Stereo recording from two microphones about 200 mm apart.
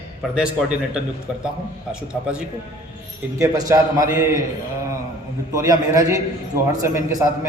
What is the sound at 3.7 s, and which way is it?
Speech, 15° right (ahead or behind).